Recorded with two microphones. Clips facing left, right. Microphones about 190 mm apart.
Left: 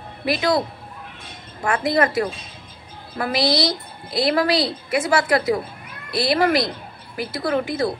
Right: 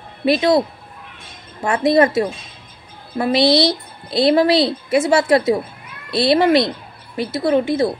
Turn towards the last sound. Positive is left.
turn(degrees=-25)  # may be behind; listen again after turning